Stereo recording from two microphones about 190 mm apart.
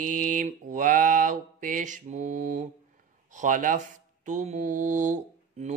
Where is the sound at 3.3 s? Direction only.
40° right (ahead or behind).